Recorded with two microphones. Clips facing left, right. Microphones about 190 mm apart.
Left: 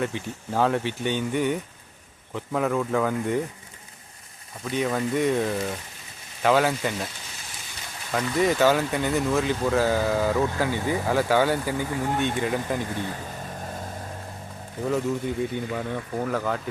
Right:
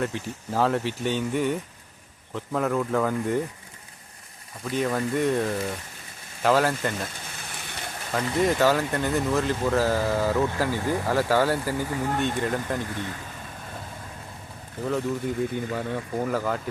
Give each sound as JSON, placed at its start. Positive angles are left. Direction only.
{"t": 0.0, "sound": "speech", "side_deg": 0}
{"t": 4.6, "sound": "speech", "side_deg": 0}
{"t": 7.3, "sound": "a sound", "side_deg": -60}
{"t": 8.1, "sound": "speech", "side_deg": 0}
{"t": 14.8, "sound": "speech", "side_deg": 0}